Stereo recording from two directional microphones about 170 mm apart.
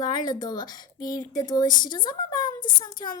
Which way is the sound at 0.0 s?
25° left (ahead or behind).